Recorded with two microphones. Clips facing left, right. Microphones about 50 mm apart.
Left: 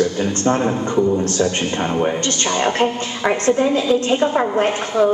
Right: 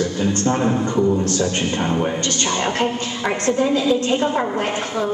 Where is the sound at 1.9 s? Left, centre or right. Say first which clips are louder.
Left 2 dB; centre.